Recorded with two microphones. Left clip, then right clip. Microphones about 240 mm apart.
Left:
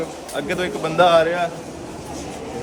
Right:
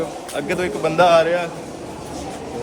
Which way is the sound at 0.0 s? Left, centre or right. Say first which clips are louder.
Right 1 dB; centre.